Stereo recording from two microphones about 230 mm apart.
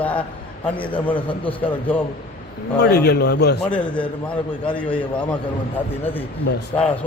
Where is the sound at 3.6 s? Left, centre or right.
Centre.